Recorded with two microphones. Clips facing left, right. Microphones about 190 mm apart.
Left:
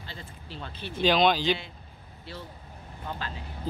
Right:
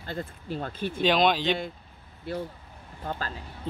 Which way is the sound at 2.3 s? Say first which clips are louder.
Right 10 dB; 55° right (ahead or behind).